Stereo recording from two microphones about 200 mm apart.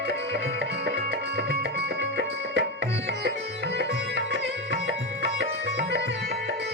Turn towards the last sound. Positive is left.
turn(degrees=-60)  # may be behind; listen again after turning